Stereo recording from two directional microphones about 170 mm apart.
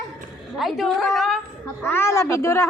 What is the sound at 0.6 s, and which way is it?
Speech, centre (ahead or behind).